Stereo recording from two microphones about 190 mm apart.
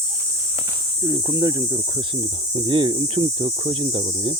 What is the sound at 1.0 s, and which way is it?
Speech, 15° right (ahead or behind).